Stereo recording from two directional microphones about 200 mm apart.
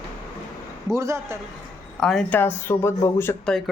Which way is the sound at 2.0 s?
Centre (ahead or behind).